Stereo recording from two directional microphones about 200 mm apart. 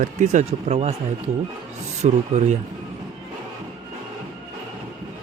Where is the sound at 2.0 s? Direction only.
35° right (ahead or behind).